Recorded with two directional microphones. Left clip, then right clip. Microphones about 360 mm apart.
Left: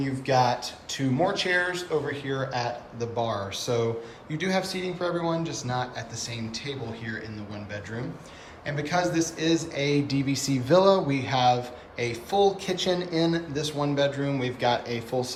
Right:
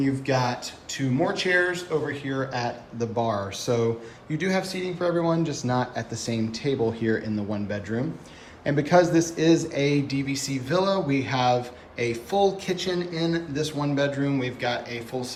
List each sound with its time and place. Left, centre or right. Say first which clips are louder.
0.0 s speech: left 1 dB; centre